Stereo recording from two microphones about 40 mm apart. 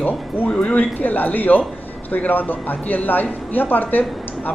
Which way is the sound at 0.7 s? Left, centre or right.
Left.